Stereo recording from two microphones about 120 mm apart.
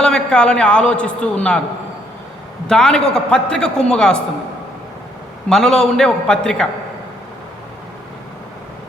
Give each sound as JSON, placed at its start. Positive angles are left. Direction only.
{"t": 0.0, "sound": "a man's voice", "side_deg": 5}
{"t": 2.6, "sound": "a man's voice", "side_deg": 5}
{"t": 5.5, "sound": "a man's voice", "side_deg": 5}